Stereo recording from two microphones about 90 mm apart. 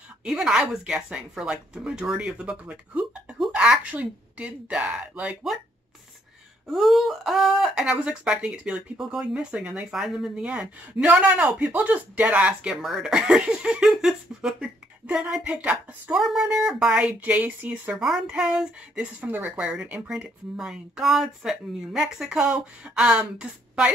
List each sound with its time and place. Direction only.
0.2 s speech: 5° right (ahead or behind)
6.7 s speech: centre (ahead or behind)
16.2 s speech: 5° right (ahead or behind)
17.9 s speech: 5° right (ahead or behind)
19.2 s speech: 20° right (ahead or behind)
19.5 s speech: 10° right (ahead or behind)